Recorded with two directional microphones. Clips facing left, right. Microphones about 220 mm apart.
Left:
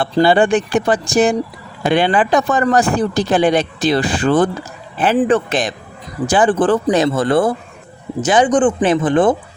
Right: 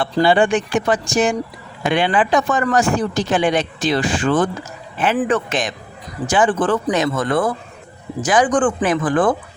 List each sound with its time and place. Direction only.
0.0 s speech: 40° left (ahead or behind)
5.1 s speech: 25° left (ahead or behind)
5.5 s speech: 35° left (ahead or behind)